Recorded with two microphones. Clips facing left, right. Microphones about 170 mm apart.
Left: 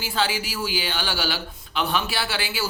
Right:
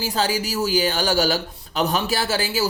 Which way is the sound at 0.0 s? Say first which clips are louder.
Right 3 dB; 40° right (ahead or behind).